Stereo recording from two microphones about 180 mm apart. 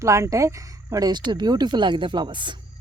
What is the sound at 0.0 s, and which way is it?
Speech, 15° right (ahead or behind).